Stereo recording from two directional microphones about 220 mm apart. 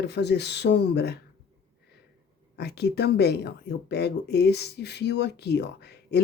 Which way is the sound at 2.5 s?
50° left (ahead or behind).